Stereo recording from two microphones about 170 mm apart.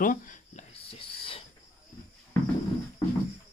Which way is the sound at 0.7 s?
35° left (ahead or behind).